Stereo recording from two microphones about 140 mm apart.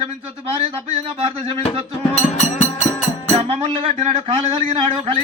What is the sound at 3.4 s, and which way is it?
A man's voice, 50° right (ahead or behind).